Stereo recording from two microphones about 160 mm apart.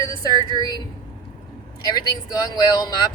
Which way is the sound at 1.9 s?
25° left (ahead or behind).